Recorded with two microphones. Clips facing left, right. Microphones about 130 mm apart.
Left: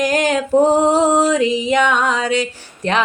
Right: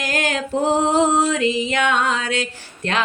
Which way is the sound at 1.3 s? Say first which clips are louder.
Left 4 dB; 15° left (ahead or behind).